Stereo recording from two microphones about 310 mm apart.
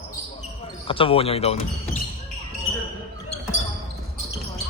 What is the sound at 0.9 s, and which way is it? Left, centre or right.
Speech, centre.